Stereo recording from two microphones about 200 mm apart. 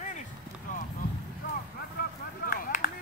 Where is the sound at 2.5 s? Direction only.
45° left (ahead or behind).